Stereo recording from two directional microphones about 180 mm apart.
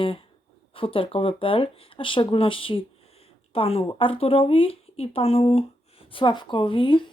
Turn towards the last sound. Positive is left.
turn(degrees=30)  # may be behind; listen again after turning